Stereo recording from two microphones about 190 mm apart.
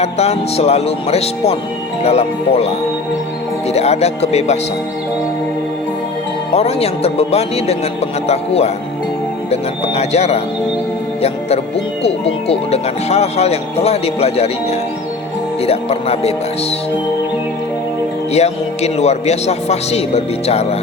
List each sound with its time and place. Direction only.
0.0 s a man's voice: 35° left (ahead or behind)
6.5 s a man's voice: 30° left (ahead or behind)
18.3 s a man's voice: 35° left (ahead or behind)